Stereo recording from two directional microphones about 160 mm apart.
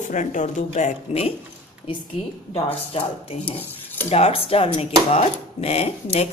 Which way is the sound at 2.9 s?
35° left (ahead or behind).